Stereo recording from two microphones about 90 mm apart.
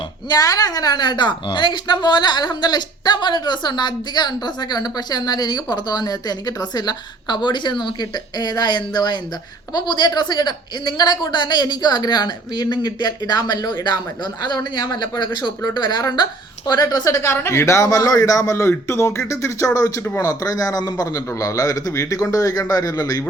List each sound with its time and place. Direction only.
0.3 s a woman's voice: 40° left (ahead or behind)
17.3 s a man's voice: 30° left (ahead or behind)